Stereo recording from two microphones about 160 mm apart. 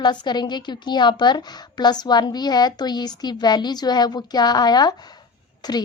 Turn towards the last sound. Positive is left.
turn(degrees=25)  # may be behind; listen again after turning